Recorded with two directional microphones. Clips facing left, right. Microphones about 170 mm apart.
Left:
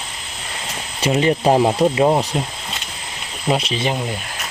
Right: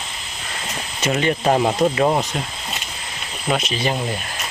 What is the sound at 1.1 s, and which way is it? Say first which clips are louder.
Speech: left 3 dB; 20° left (ahead or behind).